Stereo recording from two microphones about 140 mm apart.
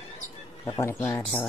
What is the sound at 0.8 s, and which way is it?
Speech, 20° left (ahead or behind).